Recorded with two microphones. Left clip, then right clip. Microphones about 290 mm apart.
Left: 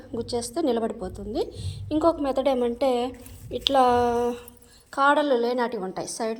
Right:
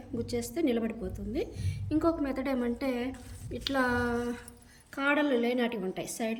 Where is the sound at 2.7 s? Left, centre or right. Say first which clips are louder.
Left 10 dB; centre.